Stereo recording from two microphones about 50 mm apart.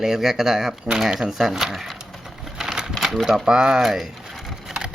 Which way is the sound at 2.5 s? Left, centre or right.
Centre.